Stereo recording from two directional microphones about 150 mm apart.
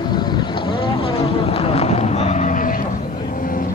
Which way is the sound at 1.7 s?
45° left (ahead or behind).